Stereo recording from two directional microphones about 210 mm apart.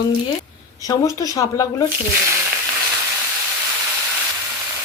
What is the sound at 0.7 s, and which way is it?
A woman's voice, 15° left (ahead or behind).